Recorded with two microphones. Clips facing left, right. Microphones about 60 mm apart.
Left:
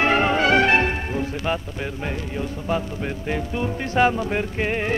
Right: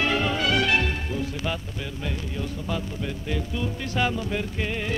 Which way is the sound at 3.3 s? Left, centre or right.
Left.